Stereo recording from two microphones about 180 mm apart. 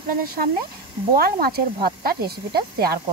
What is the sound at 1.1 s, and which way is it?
Snake, 55° right (ahead or behind).